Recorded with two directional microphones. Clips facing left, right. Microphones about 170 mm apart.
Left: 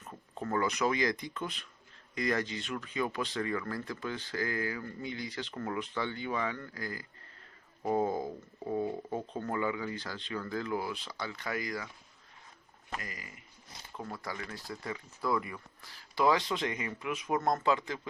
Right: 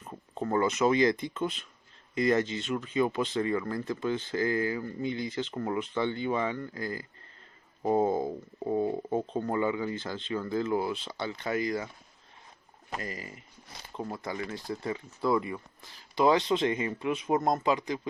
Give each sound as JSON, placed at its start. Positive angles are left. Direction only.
{"t": 0.0, "sound": "speech", "side_deg": -20}
{"t": 13.0, "sound": "speech", "side_deg": -30}